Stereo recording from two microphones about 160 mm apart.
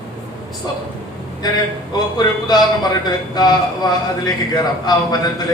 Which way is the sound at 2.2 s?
25° left (ahead or behind).